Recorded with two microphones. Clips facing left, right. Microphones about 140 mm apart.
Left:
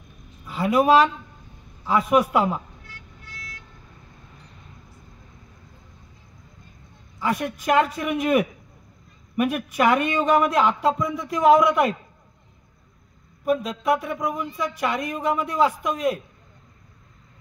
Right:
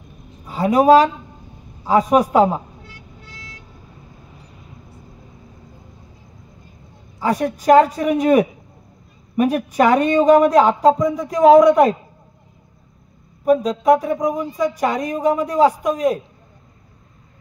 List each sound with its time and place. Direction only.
0.5 s speech: 40° right (ahead or behind)
3.2 s vehicle: 30° right (ahead or behind)
7.2 s speech: 35° right (ahead or behind)
13.5 s speech: 40° right (ahead or behind)